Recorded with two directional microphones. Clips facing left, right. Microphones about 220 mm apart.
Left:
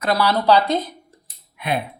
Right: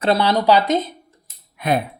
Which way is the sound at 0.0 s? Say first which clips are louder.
Right 2 dB; 25° right (ahead or behind).